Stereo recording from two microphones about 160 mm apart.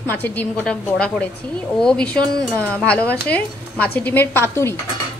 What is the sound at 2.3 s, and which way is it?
Speech, 20° right (ahead or behind).